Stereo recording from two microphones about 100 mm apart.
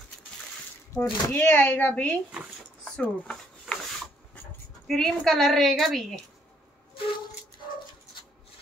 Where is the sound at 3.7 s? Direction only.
5° right (ahead or behind).